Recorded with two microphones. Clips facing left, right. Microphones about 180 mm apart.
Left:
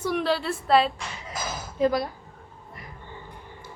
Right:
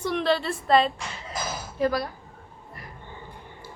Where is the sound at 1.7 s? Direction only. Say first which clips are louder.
Left 2 dB; 20° left (ahead or behind).